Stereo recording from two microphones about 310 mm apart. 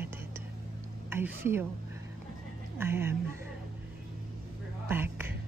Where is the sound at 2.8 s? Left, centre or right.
Centre.